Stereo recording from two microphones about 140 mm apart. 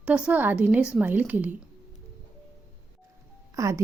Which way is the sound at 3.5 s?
20° right (ahead or behind).